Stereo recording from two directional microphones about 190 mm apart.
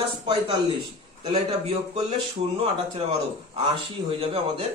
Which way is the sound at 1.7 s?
35° right (ahead or behind).